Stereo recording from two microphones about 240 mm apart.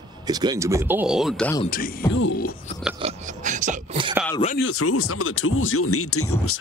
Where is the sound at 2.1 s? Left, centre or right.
Left.